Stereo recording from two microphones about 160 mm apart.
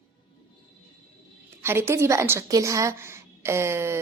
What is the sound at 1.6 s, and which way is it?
A woman's voice, 15° right (ahead or behind).